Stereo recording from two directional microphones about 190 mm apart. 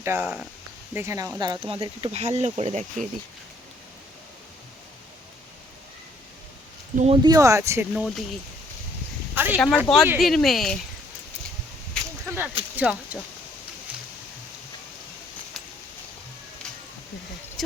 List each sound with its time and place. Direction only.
0.0 s speech: 10° right (ahead or behind); by 3.1 s 35° right (ahead or behind)
6.9 s speech: 35° right (ahead or behind)
7.3 s speech: 15° right (ahead or behind)
9.3 s a sound: 10° right (ahead or behind)
9.6 s speech: 5° left (ahead or behind)
12.2 s a sound: 10° right (ahead or behind)
12.7 s speech: 5° right (ahead or behind)